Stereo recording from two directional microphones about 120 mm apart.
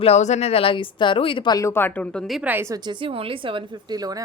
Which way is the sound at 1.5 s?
20° left (ahead or behind).